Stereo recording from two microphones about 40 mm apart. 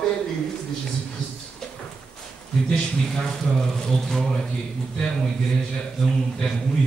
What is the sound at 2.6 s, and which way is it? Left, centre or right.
Speech, centre.